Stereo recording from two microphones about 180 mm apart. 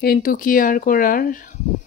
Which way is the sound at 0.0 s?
55° left (ahead or behind).